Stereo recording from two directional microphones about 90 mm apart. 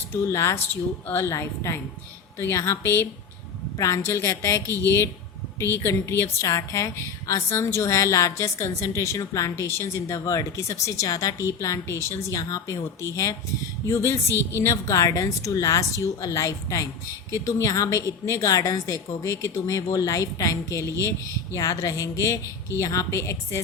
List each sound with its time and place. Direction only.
0.1 s a woman's voice: 30° left (ahead or behind)
12.4 s a woman's voice: 40° left (ahead or behind)